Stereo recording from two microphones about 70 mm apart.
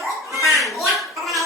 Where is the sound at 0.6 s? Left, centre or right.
Centre.